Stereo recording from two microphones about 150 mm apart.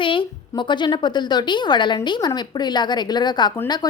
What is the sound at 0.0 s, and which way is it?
A woman's voice, 35° left (ahead or behind).